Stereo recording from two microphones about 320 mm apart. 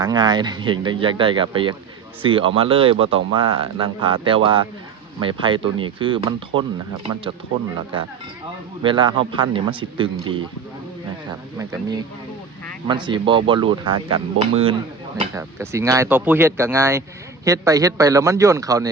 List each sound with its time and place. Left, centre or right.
0.0 s a man's voice: centre
8.8 s a man's voice: centre